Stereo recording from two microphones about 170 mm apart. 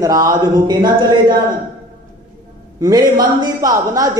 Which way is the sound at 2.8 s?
20° right (ahead or behind).